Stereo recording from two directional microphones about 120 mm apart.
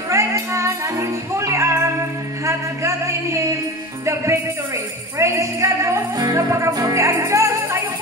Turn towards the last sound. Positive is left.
turn(degrees=-25)  # may be behind; listen again after turning